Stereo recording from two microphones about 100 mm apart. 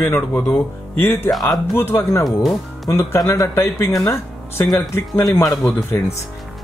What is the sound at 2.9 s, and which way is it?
Speech, 30° left (ahead or behind).